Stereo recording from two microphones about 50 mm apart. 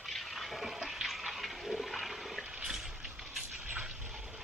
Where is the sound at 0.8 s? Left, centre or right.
Centre.